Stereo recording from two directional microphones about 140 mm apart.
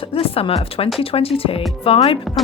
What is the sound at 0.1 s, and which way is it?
Speech, 40° left (ahead or behind).